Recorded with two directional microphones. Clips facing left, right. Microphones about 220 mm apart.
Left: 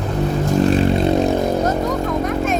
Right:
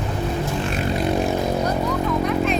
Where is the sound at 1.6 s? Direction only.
45° left (ahead or behind).